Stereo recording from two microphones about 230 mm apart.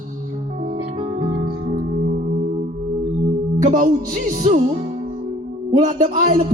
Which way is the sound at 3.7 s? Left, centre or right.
Right.